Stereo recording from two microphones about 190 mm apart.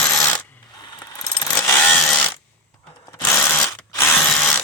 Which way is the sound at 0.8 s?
20° left (ahead or behind).